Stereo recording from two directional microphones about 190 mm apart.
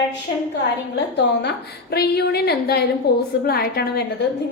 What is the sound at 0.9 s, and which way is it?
A woman's voice, 65° left (ahead or behind).